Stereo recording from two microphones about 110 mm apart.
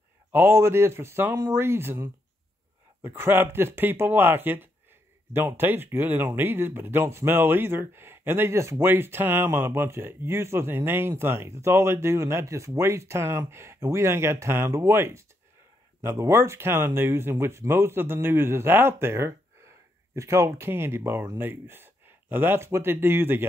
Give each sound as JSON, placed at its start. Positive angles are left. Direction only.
{"t": 0.3, "sound": "speech", "side_deg": -20}